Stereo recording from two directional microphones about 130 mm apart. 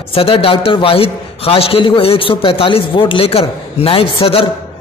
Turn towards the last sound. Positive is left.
turn(degrees=45)  # may be behind; listen again after turning